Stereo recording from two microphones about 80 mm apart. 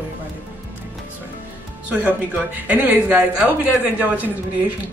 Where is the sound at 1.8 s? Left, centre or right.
Centre.